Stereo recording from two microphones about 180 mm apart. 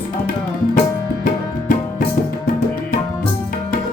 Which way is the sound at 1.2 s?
50° left (ahead or behind).